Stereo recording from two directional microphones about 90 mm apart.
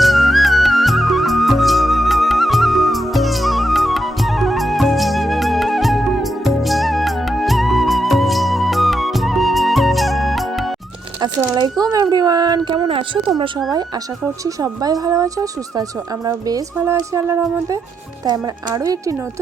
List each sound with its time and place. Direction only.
0.0 s music: centre (ahead or behind)
11.4 s a sound: 50° right (ahead or behind); by 13.3 s 70° right (ahead or behind)
14.4 s speech: 45° right (ahead or behind)
16.7 s speech: 30° right (ahead or behind)
18.3 s speech: 45° right (ahead or behind)